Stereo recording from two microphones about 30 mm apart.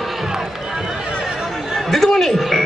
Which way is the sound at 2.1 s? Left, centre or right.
Centre.